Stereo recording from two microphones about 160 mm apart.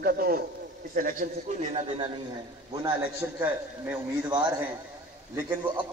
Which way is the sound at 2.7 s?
30° right (ahead or behind).